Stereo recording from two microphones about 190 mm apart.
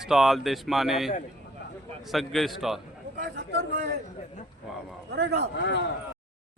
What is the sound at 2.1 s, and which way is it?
Speech, centre (ahead or behind).